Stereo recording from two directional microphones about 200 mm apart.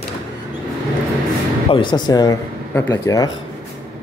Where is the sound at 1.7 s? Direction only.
25° left (ahead or behind).